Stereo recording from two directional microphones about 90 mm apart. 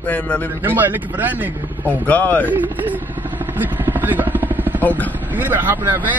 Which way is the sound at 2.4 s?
20° right (ahead or behind).